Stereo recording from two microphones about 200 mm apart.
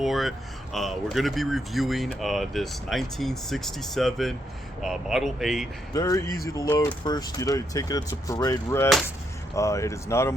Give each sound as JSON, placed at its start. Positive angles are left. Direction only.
{"t": 0.0, "sound": "speech", "side_deg": 0}
{"t": 5.9, "sound": "speech", "side_deg": 15}